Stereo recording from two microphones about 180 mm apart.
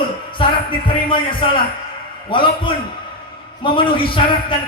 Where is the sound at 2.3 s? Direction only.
25° left (ahead or behind).